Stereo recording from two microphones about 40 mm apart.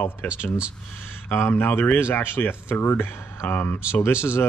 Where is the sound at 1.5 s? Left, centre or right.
Left.